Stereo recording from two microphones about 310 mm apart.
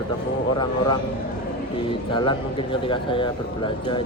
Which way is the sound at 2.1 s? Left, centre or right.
Centre.